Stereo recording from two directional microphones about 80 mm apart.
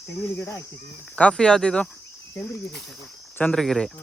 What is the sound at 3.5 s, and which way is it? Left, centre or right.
Speech, centre.